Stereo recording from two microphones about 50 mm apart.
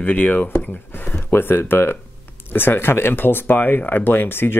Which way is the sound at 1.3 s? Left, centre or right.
Left.